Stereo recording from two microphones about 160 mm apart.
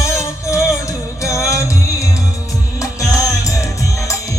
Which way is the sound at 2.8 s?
20° left (ahead or behind).